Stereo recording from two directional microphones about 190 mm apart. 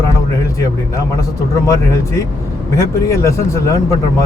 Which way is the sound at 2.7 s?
15° left (ahead or behind).